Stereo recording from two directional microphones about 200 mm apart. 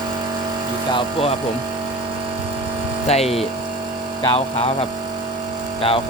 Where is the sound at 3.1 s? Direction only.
30° left (ahead or behind).